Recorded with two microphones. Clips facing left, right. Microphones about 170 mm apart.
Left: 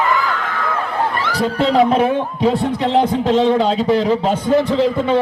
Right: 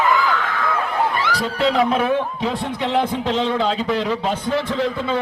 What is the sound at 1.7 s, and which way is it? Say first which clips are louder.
A man's voice: left 6 dB; 35° left (ahead or behind).